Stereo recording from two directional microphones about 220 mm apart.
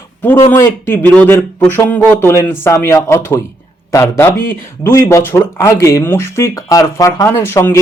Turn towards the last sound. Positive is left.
turn(degrees=10)  # may be behind; listen again after turning